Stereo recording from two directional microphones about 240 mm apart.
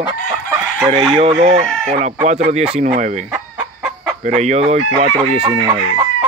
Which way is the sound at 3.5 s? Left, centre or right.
Centre.